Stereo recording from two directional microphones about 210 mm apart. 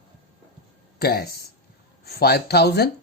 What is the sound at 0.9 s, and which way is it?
Speech, 50° left (ahead or behind).